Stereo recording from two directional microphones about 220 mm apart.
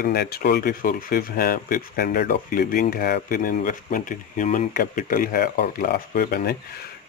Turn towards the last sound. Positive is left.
turn(degrees=40)  # may be behind; listen again after turning